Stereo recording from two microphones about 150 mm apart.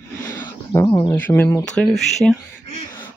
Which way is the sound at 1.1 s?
15° left (ahead or behind).